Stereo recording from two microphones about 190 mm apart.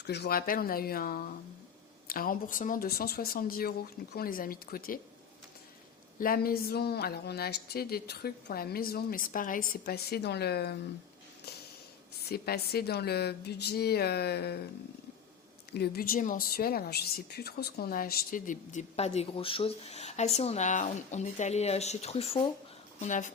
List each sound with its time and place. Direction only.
0.0 s speech: 60° left (ahead or behind)
6.1 s a woman's voice: 50° left (ahead or behind)
12.3 s a woman's voice: 55° left (ahead or behind)
15.7 s a woman's voice: 55° left (ahead or behind)